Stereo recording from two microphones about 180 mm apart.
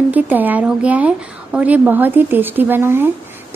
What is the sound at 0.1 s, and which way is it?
Speech, 10° right (ahead or behind).